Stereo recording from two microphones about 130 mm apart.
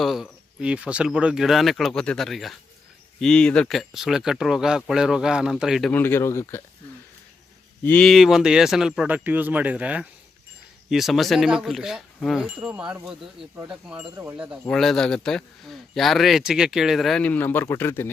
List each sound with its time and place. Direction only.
0.0 s speech: centre (ahead or behind)
5.9 s speech: 15° left (ahead or behind)
7.9 s speech: 10° left (ahead or behind)
8.1 s speech: 5° right (ahead or behind)
14.7 s speech: 5° left (ahead or behind)